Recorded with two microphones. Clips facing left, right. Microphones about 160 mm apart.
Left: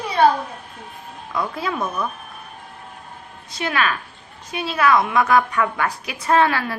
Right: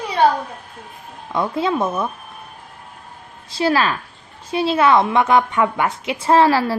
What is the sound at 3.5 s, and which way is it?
A woman's voice, 30° right (ahead or behind).